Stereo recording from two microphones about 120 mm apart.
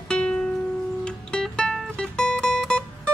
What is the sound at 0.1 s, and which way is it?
Music, 5° left (ahead or behind).